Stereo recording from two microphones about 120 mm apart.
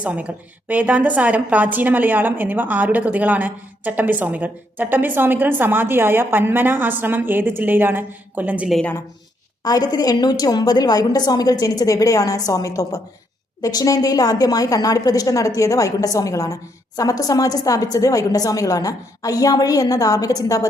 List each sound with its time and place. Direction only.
0.0 s a woman's voice: 10° right (ahead or behind)
9.6 s a woman's voice: 30° left (ahead or behind)